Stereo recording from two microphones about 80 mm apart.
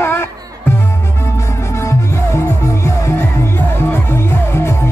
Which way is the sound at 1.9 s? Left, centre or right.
Left.